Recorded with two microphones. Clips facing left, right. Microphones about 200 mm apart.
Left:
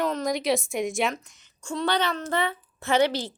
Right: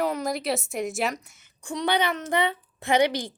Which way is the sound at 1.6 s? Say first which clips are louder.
Right 1 dB; 15° right (ahead or behind).